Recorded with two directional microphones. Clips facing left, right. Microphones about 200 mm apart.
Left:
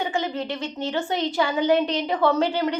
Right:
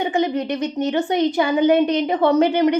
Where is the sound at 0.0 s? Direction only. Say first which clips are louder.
Right 6 dB; 20° right (ahead or behind).